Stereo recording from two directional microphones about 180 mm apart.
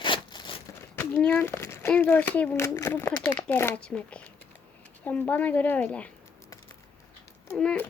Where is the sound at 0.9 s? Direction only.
10° left (ahead or behind).